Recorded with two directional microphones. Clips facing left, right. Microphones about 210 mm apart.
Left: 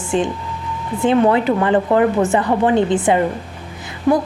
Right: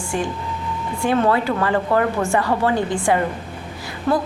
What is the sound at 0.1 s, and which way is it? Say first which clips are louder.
A woman's voice: left 5 dB; 20° left (ahead or behind).